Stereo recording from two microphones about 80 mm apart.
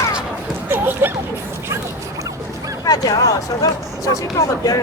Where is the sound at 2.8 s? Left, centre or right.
Left.